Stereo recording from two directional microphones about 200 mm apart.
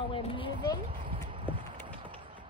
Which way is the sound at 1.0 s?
25° right (ahead or behind).